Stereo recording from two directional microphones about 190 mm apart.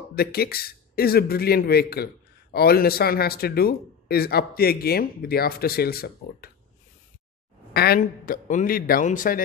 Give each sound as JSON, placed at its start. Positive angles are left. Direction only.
{"t": 0.1, "sound": "speech", "side_deg": 55}
{"t": 7.7, "sound": "speech", "side_deg": 55}